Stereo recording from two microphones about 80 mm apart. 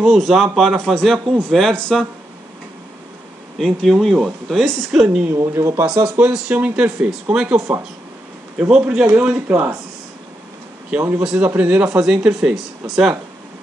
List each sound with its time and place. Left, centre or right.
0.0 s speech: centre
3.5 s speech: centre
5.3 s speech: right
6.0 s a man's voice: centre
8.5 s speech: centre
10.9 s a man's voice: right; by 13.1 s centre